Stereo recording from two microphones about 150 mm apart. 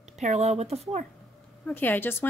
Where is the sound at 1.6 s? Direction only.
10° left (ahead or behind).